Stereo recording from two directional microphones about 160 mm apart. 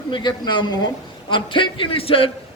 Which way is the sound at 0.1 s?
30° left (ahead or behind).